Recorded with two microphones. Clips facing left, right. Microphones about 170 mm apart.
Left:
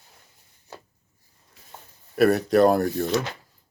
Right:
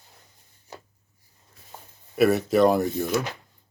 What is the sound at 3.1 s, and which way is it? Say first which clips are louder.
Speech: left 1 dB; 10° right (ahead or behind).